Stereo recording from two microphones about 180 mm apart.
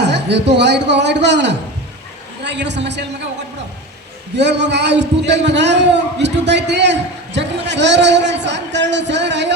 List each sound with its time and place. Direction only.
0.0 s a man's voice: 70° right (ahead or behind)
4.4 s a man's voice: 75° right (ahead or behind)